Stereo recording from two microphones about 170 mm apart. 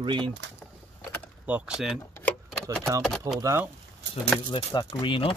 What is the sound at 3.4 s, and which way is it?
Speech, 15° right (ahead or behind).